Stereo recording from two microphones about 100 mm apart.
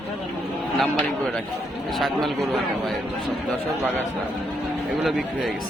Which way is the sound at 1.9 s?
Centre (ahead or behind).